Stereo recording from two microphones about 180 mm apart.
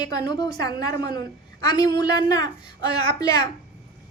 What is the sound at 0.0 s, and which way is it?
A woman's voice, 20° left (ahead or behind).